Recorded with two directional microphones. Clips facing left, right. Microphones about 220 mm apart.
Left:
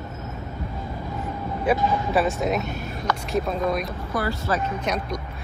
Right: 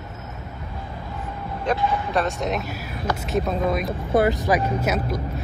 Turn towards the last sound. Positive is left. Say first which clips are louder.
# right 3 dB
turn(degrees=-5)  # may be behind; listen again after turning